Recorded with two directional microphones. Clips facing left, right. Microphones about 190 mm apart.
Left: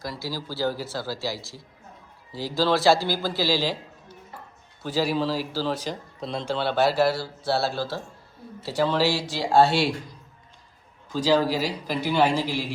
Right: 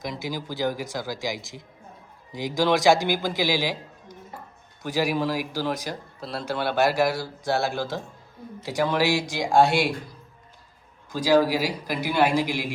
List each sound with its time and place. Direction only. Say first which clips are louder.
0.0 s a man's voice: right 1 dB; 20° right (ahead or behind)
11.1 s a man's voice: right 2 dB; 10° right (ahead or behind)